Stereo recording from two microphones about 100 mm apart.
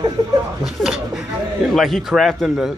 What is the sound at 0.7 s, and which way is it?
Speech, 5° right (ahead or behind).